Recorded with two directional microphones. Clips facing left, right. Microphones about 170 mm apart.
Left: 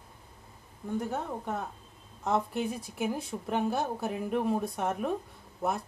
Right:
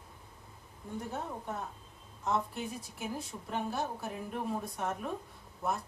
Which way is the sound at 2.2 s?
70° left (ahead or behind).